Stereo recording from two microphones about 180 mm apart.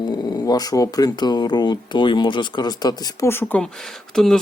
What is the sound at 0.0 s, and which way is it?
Speech, 20° left (ahead or behind).